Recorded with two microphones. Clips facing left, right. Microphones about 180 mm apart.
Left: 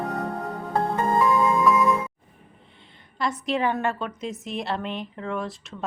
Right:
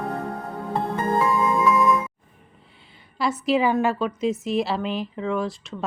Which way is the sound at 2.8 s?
5° right (ahead or behind).